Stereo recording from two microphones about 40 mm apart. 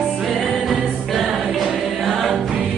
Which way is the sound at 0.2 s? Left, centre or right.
Centre.